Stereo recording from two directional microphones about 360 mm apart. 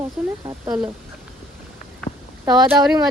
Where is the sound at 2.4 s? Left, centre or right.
Centre.